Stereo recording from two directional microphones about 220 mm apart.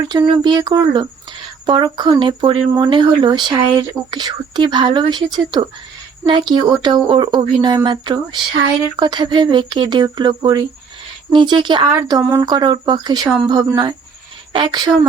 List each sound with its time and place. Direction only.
0.1 s speech: 20° right (ahead or behind)